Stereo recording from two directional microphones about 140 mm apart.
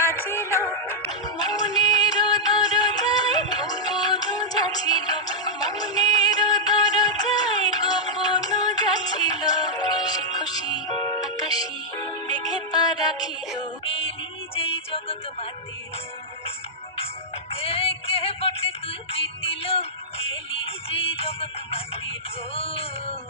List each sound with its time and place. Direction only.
0.0 s music: 15° left (ahead or behind)
1.5 s music: 30° left (ahead or behind)
13.8 s music: 40° left (ahead or behind)
17.0 s music: 45° left (ahead or behind)